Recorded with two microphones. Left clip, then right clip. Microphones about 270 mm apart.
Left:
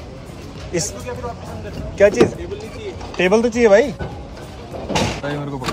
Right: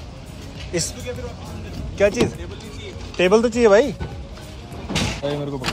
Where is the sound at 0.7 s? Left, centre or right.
Centre.